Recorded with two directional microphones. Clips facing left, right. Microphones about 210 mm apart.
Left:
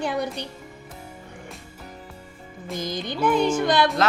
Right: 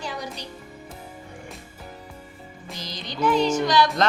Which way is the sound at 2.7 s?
50° left (ahead or behind).